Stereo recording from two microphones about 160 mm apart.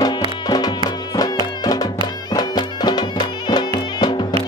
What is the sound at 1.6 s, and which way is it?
Music, 25° left (ahead or behind).